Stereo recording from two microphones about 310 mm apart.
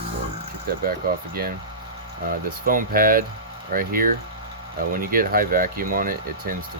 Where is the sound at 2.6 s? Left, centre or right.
Right.